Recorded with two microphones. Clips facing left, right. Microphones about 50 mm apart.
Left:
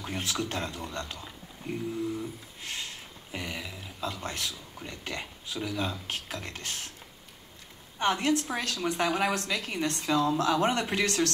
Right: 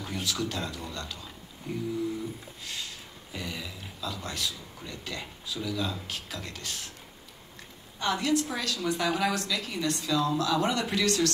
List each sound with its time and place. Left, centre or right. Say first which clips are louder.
0.0 s a woman's voice: even; left
1.6 s music: left 1 dB; left
2.6 s speech: left 2 dB; left
8.0 s a woman's voice: left 1 dB; left